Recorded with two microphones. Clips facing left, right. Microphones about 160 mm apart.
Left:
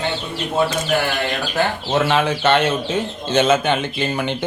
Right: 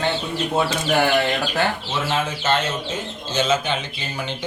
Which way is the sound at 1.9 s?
65° left (ahead or behind).